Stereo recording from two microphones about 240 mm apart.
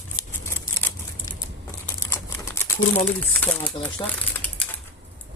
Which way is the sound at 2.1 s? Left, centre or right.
Centre.